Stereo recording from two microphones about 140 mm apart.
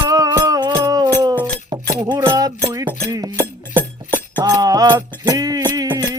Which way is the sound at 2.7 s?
25° right (ahead or behind).